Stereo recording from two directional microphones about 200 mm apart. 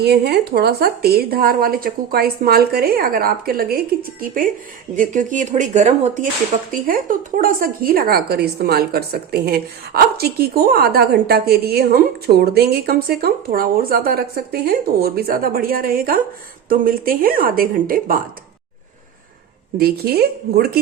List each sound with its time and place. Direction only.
0.0 s a woman's voice: 55° right (ahead or behind)
19.7 s a woman's voice: 50° right (ahead or behind)